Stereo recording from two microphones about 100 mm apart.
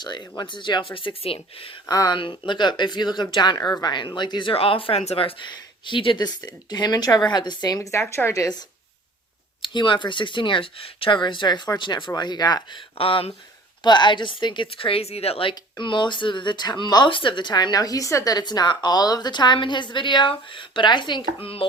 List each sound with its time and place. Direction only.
0.0 s speech: 45° left (ahead or behind); by 1.8 s 65° left (ahead or behind)
1.9 s speech: 40° left (ahead or behind)
2.1 s speech: 55° left (ahead or behind)
4.5 s speech: 70° left (ahead or behind)
5.5 s speech: 55° left (ahead or behind)
6.2 s speech: 45° left (ahead or behind)
9.6 s speech: 55° left (ahead or behind)
13.0 s speech: 65° left (ahead or behind)
13.8 s speech: 50° left (ahead or behind); by 15.5 s 70° left (ahead or behind)
15.8 s speech: 50° left (ahead or behind)
21.4 s speech: 70° left (ahead or behind)